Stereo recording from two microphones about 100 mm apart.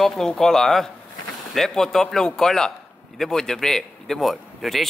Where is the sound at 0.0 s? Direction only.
5° left (ahead or behind).